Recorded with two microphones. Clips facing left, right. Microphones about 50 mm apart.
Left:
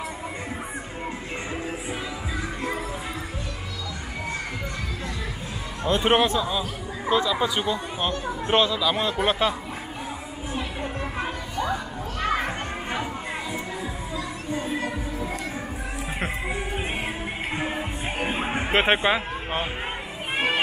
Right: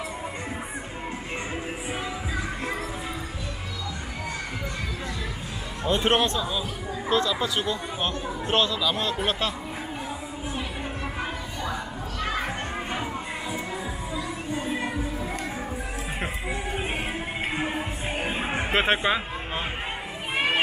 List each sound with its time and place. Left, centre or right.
5.9 s speech: centre
11.1 s music: centre
12.4 s children playing: centre
14.1 s music: centre
17.6 s music: left
18.4 s a sound: centre